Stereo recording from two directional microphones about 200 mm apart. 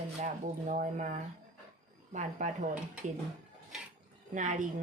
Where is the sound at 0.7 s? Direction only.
40° right (ahead or behind).